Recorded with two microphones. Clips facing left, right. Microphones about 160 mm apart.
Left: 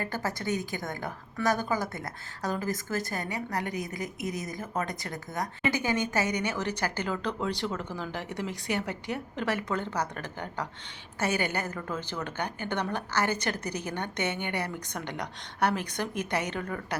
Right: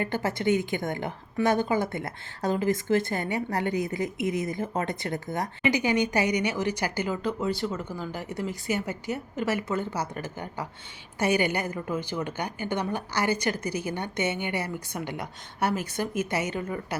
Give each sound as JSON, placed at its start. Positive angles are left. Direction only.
{"t": 0.0, "sound": "a woman's voice", "side_deg": -25}
{"t": 5.7, "sound": "a woman's voice", "side_deg": -15}